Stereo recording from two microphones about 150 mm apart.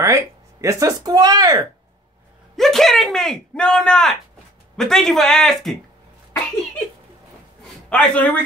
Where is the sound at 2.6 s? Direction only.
Centre (ahead or behind).